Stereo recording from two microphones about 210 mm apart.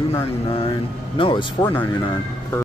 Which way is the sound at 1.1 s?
25° left (ahead or behind).